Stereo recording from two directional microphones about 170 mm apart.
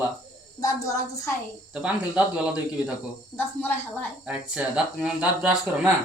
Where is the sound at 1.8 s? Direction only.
5° right (ahead or behind).